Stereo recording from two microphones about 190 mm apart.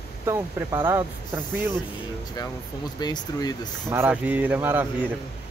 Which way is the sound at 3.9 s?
10° right (ahead or behind).